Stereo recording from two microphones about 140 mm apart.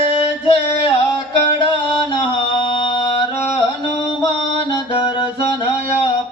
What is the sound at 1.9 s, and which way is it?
Mantra, 35° left (ahead or behind).